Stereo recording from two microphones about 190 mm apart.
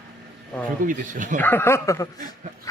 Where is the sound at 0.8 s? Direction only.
45° right (ahead or behind).